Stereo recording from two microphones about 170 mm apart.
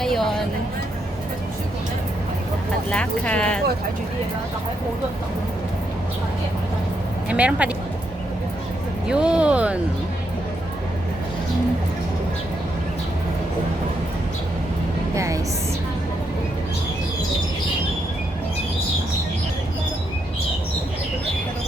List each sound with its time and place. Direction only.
0.0 s music: centre (ahead or behind)
2.9 s speech: 5° left (ahead or behind)
7.3 s speech: 10° right (ahead or behind)
9.0 s speech: 5° right (ahead or behind)
15.1 s music: 20° right (ahead or behind)